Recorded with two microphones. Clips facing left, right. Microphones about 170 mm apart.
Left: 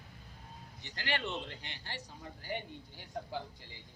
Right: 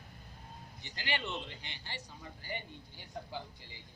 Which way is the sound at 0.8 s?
5° right (ahead or behind).